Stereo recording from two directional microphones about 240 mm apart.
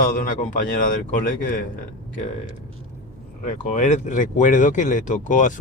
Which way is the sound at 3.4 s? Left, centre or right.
Left.